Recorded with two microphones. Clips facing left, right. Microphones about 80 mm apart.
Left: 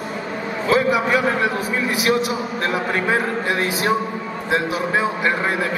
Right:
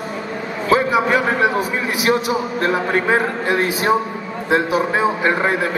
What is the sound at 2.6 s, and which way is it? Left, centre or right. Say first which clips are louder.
A man's voice: right 3 dB; right.